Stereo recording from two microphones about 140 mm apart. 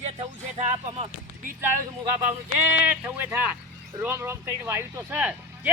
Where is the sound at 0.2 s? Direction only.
45° right (ahead or behind).